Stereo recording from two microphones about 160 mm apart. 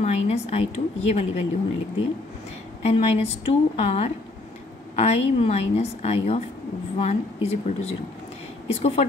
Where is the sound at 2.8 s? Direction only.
40° left (ahead or behind).